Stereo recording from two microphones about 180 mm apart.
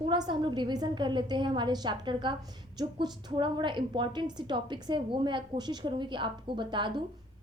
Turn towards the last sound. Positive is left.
turn(degrees=-25)  # may be behind; listen again after turning